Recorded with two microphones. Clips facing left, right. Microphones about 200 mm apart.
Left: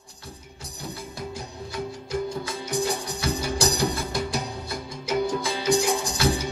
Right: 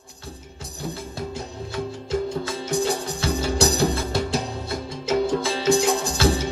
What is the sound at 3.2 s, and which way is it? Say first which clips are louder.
Music: right 4 dB; 25° right (ahead or behind).